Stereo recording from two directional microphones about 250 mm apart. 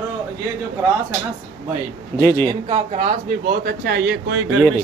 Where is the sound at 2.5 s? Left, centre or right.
Centre.